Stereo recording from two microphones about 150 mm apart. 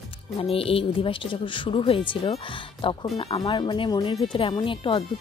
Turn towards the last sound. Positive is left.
turn(degrees=35)  # may be behind; listen again after turning